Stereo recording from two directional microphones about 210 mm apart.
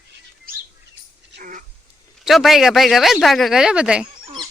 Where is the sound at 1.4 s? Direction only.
40° right (ahead or behind).